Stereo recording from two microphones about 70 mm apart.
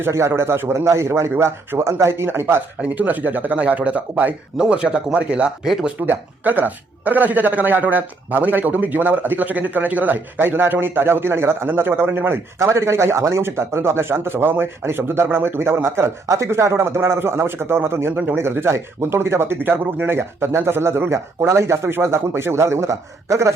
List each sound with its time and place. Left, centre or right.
0.0 s speech: right
2.8 s speech: right
4.5 s speech: centre; by 16.1 s right
16.2 s speech: right